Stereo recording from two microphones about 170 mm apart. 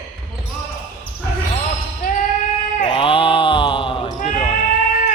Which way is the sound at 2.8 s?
30° left (ahead or behind).